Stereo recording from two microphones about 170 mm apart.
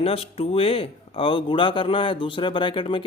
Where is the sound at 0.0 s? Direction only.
35° left (ahead or behind).